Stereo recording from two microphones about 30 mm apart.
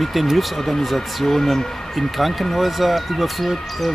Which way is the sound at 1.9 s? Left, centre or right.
Centre.